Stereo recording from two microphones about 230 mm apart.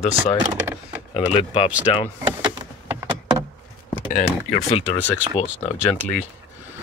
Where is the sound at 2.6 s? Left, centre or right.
Centre.